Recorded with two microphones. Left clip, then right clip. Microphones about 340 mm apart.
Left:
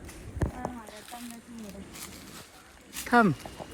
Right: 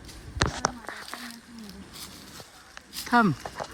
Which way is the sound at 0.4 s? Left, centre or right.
Left.